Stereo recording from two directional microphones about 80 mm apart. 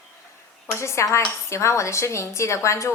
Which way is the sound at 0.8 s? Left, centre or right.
Left.